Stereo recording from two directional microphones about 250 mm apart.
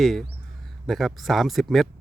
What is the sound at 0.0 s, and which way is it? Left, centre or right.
Speech, centre.